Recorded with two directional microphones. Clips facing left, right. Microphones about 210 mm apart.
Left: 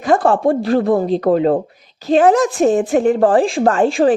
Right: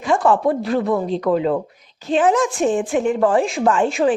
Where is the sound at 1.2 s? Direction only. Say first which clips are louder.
Left 4 dB; 50° left (ahead or behind).